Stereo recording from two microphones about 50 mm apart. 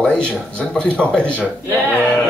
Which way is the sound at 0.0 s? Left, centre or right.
Centre.